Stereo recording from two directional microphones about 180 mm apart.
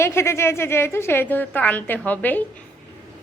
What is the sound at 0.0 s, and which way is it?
A woman's voice, 15° left (ahead or behind).